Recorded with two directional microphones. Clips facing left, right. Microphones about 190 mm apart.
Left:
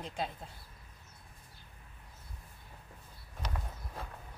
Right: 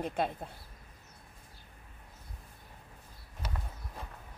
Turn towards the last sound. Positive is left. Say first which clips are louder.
# left 1 dB
turn(degrees=-5)  # may be behind; listen again after turning